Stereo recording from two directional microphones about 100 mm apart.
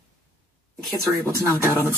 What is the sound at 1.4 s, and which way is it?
Speech, 25° right (ahead or behind).